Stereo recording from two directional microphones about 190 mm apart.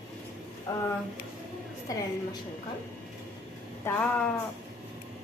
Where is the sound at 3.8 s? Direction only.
5° left (ahead or behind).